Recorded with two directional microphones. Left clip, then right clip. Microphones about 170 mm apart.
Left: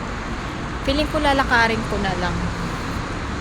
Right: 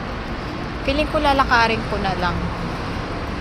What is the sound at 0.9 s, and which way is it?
Speech, 20° left (ahead or behind).